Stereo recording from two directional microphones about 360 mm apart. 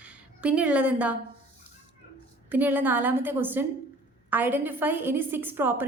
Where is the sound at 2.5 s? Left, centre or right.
Centre.